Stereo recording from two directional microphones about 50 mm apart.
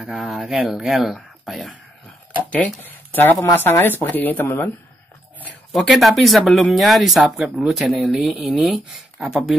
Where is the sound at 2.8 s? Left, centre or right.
Left.